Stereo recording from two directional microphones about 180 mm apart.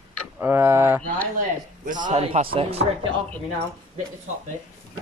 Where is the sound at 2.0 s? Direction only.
35° right (ahead or behind).